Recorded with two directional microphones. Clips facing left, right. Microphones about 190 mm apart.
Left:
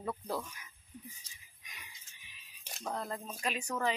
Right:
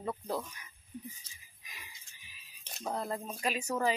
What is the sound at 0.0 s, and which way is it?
Speech, 20° right (ahead or behind).